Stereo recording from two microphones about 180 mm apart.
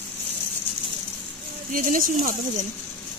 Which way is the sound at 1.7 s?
50° right (ahead or behind).